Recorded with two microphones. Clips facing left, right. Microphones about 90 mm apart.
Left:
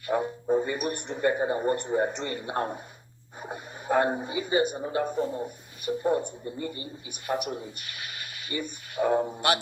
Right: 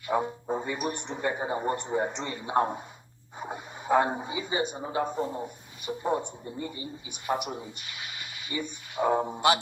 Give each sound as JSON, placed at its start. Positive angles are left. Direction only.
{"t": 0.1, "sound": "speech", "side_deg": -20}
{"t": 3.4, "sound": "radio", "side_deg": -20}
{"t": 4.2, "sound": "speech", "side_deg": -20}
{"t": 8.4, "sound": "speech", "side_deg": 50}
{"t": 9.0, "sound": "speech", "side_deg": -25}